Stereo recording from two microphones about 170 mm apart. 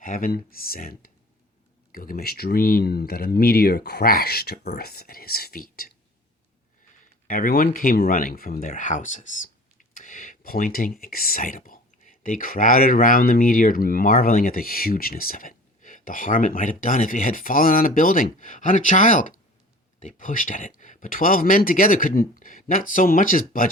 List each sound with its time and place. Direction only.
0.0 s speech: 55° left (ahead or behind)
7.3 s speech: 55° left (ahead or behind)